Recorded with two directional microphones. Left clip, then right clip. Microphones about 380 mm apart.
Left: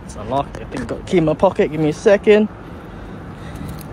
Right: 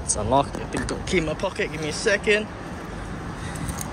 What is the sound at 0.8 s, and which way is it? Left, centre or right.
Speech, centre.